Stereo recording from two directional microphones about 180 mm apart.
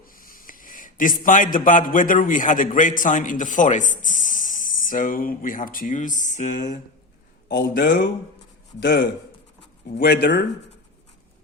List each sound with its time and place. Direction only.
0.0 s a man's voice: 50° left (ahead or behind)
7.4 s speech: 75° left (ahead or behind)
8.8 s speech: 65° left (ahead or behind)